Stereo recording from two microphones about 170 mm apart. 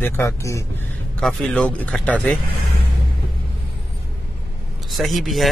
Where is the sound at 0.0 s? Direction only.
15° left (ahead or behind).